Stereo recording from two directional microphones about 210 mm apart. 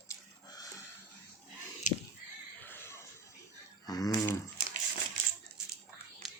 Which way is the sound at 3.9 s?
15° left (ahead or behind).